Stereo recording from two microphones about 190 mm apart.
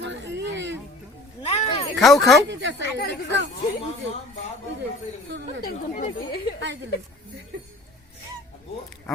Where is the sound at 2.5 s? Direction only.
70° right (ahead or behind).